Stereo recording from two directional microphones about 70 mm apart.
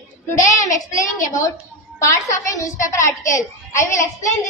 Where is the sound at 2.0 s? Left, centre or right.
Left.